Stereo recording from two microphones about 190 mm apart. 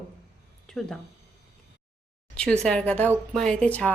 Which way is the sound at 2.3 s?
5° left (ahead or behind).